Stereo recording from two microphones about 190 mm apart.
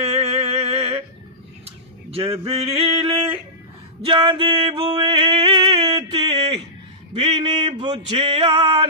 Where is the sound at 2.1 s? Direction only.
30° right (ahead or behind).